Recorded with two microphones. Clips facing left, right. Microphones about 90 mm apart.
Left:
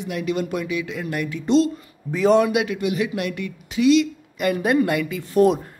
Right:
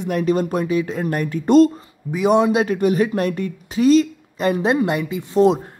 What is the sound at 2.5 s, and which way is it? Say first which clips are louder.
Speech: right 5 dB; 40° right (ahead or behind).